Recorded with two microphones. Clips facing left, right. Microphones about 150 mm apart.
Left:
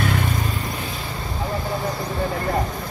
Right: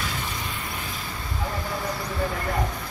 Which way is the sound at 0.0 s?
60° left (ahead or behind).